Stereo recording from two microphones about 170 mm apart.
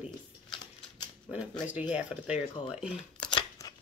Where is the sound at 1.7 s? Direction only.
10° right (ahead or behind).